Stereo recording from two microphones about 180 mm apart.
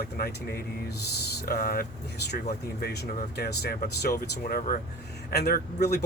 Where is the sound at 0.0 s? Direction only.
60° left (ahead or behind).